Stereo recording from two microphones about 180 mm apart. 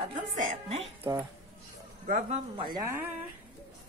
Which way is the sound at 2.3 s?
30° right (ahead or behind).